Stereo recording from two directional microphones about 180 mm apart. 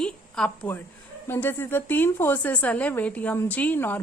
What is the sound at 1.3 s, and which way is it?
A woman's voice, 10° left (ahead or behind).